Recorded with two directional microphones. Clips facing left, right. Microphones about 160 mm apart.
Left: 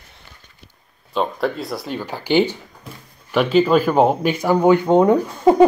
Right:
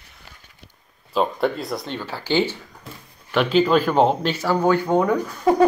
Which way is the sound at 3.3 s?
5° left (ahead or behind).